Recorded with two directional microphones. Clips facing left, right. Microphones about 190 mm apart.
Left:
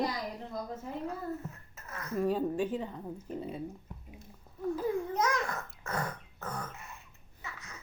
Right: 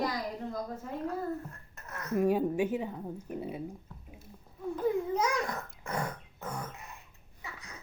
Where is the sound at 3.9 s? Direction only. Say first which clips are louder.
Left 2 dB; 20° left (ahead or behind).